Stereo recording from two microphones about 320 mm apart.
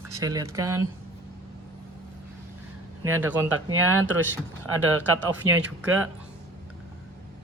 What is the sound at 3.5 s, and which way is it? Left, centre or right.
Speech, right.